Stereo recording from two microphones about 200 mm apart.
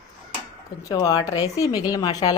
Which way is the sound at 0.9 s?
15° left (ahead or behind).